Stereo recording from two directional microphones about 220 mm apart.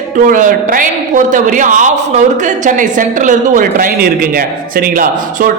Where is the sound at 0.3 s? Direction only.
40° right (ahead or behind).